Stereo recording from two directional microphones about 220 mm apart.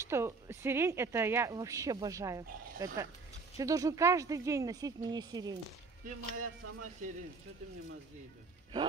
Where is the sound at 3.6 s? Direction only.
15° right (ahead or behind).